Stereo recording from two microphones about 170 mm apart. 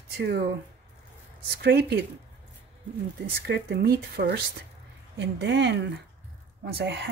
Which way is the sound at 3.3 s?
75° right (ahead or behind).